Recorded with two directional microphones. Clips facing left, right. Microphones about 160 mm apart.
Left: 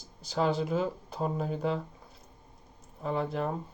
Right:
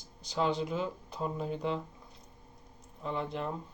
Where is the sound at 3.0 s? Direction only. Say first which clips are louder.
Left 4 dB; 40° left (ahead or behind).